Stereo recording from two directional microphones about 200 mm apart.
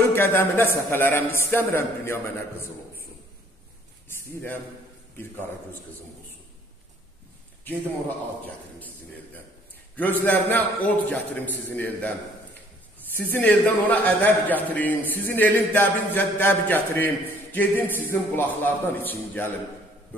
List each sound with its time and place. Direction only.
0.0 s a man's voice: 10° left (ahead or behind)
5.1 s a man's voice: 10° left (ahead or behind)
9.9 s a man's voice: 10° left (ahead or behind)
13.1 s a man's voice: 10° left (ahead or behind)